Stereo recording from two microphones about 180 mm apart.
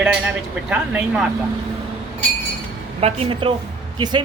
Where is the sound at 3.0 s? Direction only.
30° right (ahead or behind).